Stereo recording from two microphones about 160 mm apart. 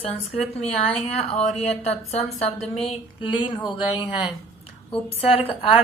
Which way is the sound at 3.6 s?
30° left (ahead or behind).